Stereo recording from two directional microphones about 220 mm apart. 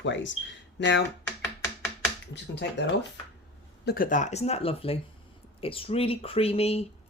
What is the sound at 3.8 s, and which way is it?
Speech, 40° left (ahead or behind).